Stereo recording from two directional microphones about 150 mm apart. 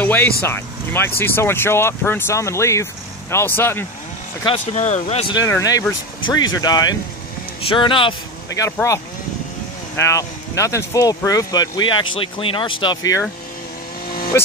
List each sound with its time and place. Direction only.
0.0 s vehicle: 10° left (ahead or behind)
0.4 s speech: 15° left (ahead or behind)
4.7 s speech: 50° left (ahead or behind)
5.3 s speech: 25° left (ahead or behind)
8.5 s speech: 20° left (ahead or behind)
9.9 s speech: 20° left (ahead or behind)
14.3 s speech: 20° left (ahead or behind)